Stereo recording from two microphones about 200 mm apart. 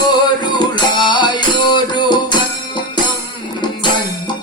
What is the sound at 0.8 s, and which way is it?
Music, 20° left (ahead or behind).